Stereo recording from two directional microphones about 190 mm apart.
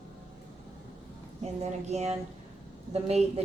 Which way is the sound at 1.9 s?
35° right (ahead or behind).